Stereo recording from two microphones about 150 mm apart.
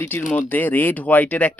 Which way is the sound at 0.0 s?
15° left (ahead or behind).